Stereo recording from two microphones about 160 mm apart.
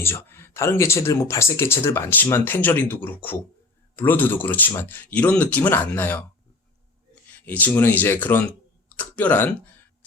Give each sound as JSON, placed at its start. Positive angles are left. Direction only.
{"t": 0.0, "sound": "speech", "side_deg": 15}
{"t": 7.4, "sound": "speech", "side_deg": 10}